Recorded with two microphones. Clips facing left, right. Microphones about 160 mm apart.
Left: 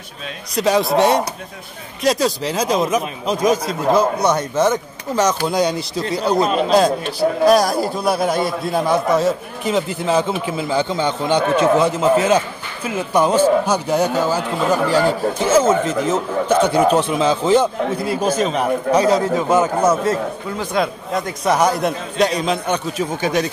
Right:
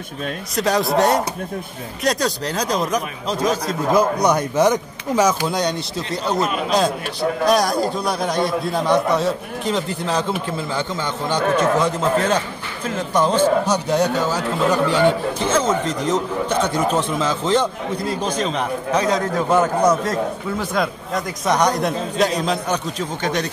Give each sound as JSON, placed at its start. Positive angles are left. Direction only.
{"t": 0.6, "sound": "a man's voice", "side_deg": 0}
{"t": 3.9, "sound": "speech", "side_deg": -10}
{"t": 5.5, "sound": "a man's voice", "side_deg": 0}
{"t": 10.8, "sound": "speech", "side_deg": 30}
{"t": 11.6, "sound": "a man's voice", "side_deg": 5}